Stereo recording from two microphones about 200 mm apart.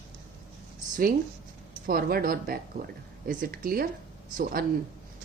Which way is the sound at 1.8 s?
45° right (ahead or behind).